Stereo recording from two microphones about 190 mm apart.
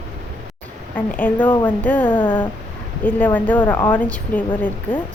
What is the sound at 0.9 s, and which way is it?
A woman's voice, 10° left (ahead or behind).